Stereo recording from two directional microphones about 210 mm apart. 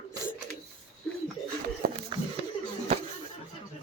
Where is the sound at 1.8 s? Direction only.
45° right (ahead or behind).